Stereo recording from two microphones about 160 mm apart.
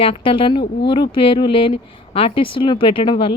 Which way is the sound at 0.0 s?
35° left (ahead or behind).